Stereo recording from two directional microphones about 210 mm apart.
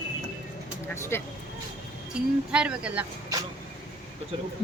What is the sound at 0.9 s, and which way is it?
Speech, 10° left (ahead or behind).